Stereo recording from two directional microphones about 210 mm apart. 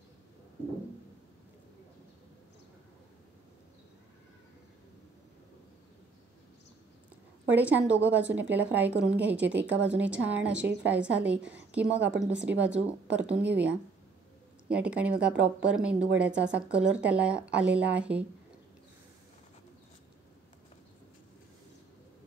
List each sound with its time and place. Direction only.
7.4 s speech: 5° right (ahead or behind)